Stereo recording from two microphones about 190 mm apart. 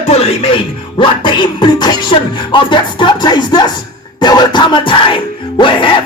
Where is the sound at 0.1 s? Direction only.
35° left (ahead or behind).